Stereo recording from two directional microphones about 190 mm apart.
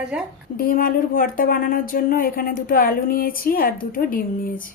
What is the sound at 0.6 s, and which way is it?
Speech, 50° left (ahead or behind).